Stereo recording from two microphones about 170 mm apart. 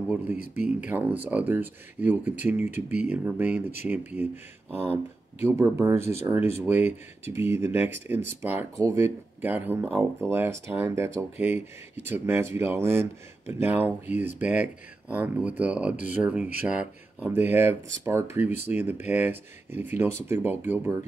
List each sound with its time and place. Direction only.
0.8 s speech: 10° right (ahead or behind)
5.4 s speech: 15° right (ahead or behind)